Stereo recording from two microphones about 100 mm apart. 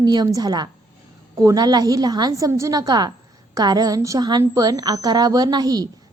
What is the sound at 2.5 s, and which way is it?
A woman's voice, 30° right (ahead or behind).